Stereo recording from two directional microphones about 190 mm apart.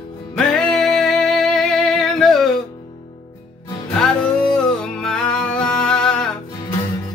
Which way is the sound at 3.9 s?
5° left (ahead or behind).